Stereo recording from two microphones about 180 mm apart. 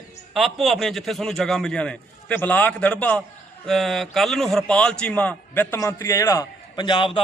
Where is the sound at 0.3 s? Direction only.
Centre (ahead or behind).